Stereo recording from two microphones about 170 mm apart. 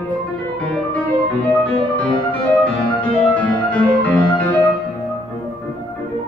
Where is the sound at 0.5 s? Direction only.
10° left (ahead or behind).